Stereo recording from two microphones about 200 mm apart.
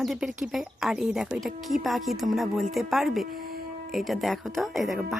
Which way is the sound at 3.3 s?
45° right (ahead or behind).